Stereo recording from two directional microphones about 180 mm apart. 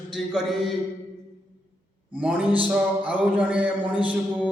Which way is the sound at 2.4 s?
30° right (ahead or behind).